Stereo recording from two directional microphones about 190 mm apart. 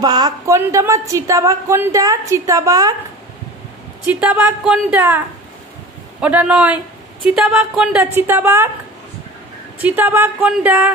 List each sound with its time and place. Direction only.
0.0 s speech: 20° right (ahead or behind)
4.0 s speech: 10° right (ahead or behind)
6.2 s speech: 5° right (ahead or behind)
9.8 s speech: 10° right (ahead or behind)